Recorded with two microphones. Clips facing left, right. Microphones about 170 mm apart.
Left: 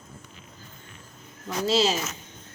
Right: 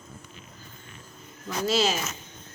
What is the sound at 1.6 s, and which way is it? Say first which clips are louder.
Speech: left 2 dB; 30° left (ahead or behind).